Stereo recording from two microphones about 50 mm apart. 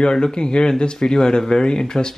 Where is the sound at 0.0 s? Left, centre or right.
Centre.